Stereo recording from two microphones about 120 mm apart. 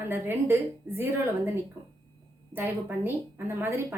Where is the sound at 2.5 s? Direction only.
15° right (ahead or behind).